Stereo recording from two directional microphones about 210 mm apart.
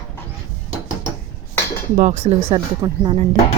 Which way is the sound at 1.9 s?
35° right (ahead or behind).